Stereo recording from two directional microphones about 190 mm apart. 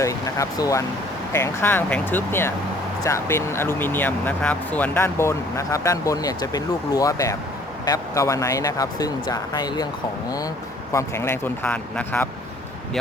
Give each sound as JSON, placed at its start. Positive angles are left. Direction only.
{"t": 0.0, "sound": "speech", "side_deg": 15}
{"t": 10.9, "sound": "speech", "side_deg": 15}